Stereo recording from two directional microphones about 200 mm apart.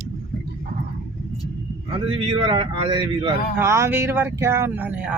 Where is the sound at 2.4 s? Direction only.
25° right (ahead or behind).